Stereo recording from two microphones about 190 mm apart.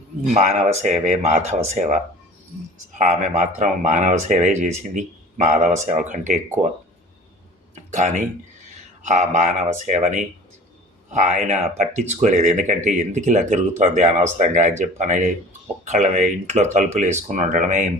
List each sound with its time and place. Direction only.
0.3 s speech: 35° right (ahead or behind)
7.9 s speech: 40° right (ahead or behind)